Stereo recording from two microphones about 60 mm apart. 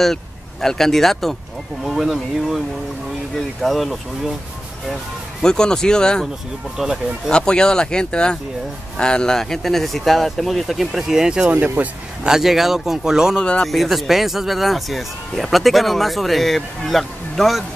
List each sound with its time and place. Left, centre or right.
0.0 s speech: centre
5.4 s speech: centre
6.8 s speech: centre
7.2 s speech: centre
11.6 s speech: right
12.2 s speech: centre
13.4 s speech: centre
13.7 s speech: centre